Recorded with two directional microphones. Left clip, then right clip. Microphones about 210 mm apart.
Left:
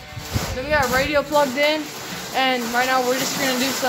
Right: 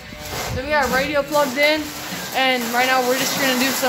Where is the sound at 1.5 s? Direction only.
Centre (ahead or behind).